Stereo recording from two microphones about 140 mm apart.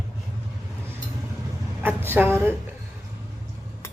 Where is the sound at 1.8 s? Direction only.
15° right (ahead or behind).